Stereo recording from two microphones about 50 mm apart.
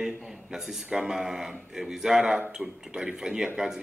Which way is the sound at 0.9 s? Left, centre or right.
Centre.